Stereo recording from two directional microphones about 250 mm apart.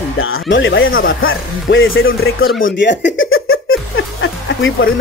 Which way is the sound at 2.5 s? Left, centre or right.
Left.